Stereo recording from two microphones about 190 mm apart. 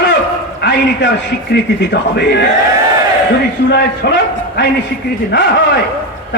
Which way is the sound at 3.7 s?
65° left (ahead or behind).